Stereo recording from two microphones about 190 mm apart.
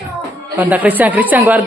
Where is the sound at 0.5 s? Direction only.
10° right (ahead or behind).